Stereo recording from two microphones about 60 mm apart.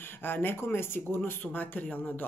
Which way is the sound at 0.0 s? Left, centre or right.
Left.